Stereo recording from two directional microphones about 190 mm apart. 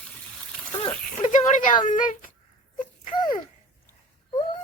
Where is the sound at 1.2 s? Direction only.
40° left (ahead or behind).